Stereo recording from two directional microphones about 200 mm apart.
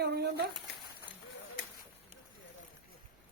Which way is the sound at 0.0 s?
55° right (ahead or behind).